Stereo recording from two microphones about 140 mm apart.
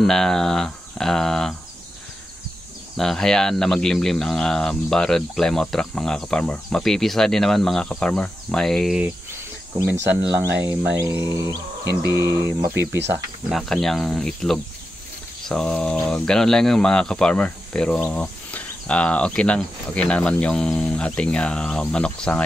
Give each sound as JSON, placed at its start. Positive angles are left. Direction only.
{"t": 0.0, "sound": "speech", "side_deg": 5}
{"t": 3.0, "sound": "speech", "side_deg": 5}
{"t": 10.4, "sound": "speech", "side_deg": -15}
{"t": 11.3, "sound": "a sound", "side_deg": -20}
{"t": 12.5, "sound": "speech", "side_deg": -15}
{"t": 13.5, "sound": "speech", "side_deg": 0}